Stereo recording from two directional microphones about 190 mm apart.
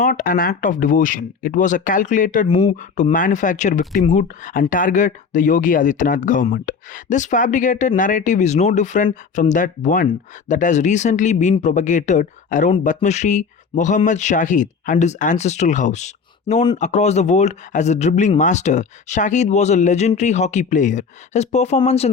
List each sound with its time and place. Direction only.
0.0 s speech: 45° left (ahead or behind)